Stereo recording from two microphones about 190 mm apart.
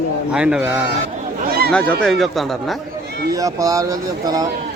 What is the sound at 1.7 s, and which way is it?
Speech, 5° left (ahead or behind).